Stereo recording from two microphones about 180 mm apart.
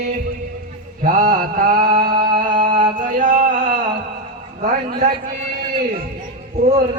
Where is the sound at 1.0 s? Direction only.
50° right (ahead or behind).